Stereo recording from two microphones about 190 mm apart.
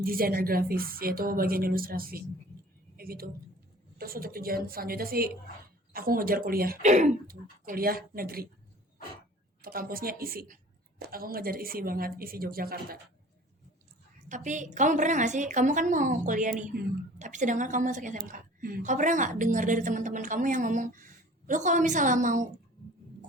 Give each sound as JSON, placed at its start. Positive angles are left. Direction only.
{"t": 0.0, "sound": "speech", "side_deg": -50}
{"t": 2.9, "sound": "a sound", "side_deg": -50}
{"t": 3.9, "sound": "speech", "side_deg": -50}
{"t": 9.6, "sound": "speech", "side_deg": -50}
{"t": 14.3, "sound": "a woman's voice", "side_deg": -40}